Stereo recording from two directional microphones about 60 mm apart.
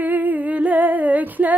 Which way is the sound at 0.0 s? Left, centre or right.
Right.